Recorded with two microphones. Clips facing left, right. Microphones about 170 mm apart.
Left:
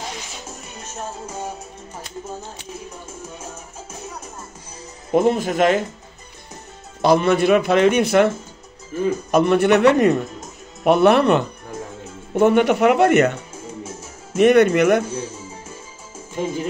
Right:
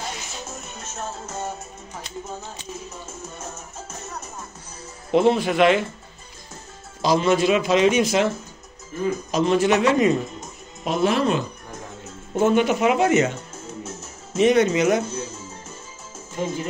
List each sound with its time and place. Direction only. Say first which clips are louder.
0.5 s music: even; 10° left (ahead or behind)
3.9 s music: left 2 dB; 10° left (ahead or behind)
5.1 s speech: left 1 dB; 45° left (ahead or behind)
7.0 s speech: left 3 dB; 60° left (ahead or behind)
9.3 s speech: left 4 dB; 60° left (ahead or behind)
13.8 s music: left 1 dB; 10° left (ahead or behind)
14.3 s speech: left 4 dB; 60° left (ahead or behind)
15.0 s music: left 3 dB; 10° left (ahead or behind)